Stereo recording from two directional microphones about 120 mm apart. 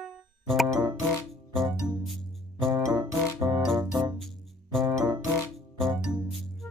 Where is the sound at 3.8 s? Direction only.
35° right (ahead or behind).